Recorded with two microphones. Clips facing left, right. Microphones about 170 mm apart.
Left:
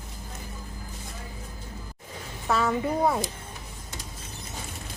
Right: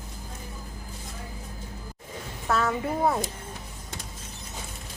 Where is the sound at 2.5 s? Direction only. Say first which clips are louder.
Left 1 dB; centre (ahead or behind).